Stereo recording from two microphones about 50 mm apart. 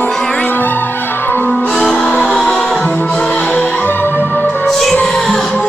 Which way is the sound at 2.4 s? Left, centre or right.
Centre.